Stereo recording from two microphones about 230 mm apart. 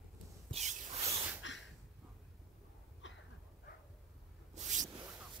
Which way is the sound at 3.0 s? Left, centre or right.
Left.